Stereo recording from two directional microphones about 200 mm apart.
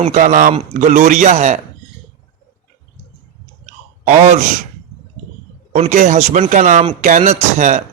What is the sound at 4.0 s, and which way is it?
Speech, 35° right (ahead or behind).